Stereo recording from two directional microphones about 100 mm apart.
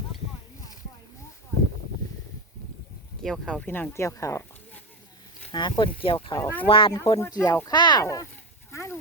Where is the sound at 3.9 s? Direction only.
30° left (ahead or behind).